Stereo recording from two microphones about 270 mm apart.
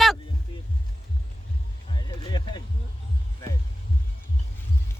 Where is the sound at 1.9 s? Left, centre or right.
Centre.